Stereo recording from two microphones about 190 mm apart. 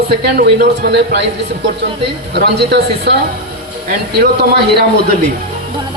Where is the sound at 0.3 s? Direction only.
60° right (ahead or behind).